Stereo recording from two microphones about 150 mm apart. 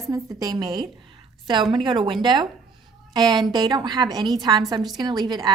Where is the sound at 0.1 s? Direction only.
25° right (ahead or behind).